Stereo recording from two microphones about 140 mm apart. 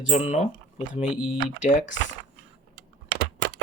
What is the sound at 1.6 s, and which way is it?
Speech, 65° left (ahead or behind).